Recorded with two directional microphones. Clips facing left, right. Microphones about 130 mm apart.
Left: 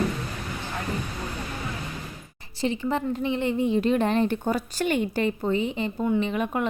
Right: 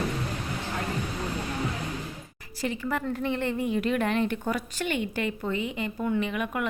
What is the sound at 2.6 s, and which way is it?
Speech, 25° left (ahead or behind).